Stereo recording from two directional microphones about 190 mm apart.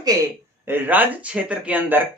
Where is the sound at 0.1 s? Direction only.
20° right (ahead or behind).